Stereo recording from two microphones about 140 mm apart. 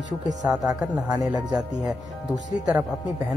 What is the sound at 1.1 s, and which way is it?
Speech, 25° right (ahead or behind).